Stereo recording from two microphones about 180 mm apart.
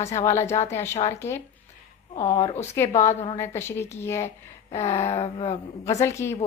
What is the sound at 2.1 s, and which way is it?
Speech, 30° left (ahead or behind).